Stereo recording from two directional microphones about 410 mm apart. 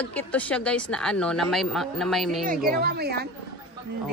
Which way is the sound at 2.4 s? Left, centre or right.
Right.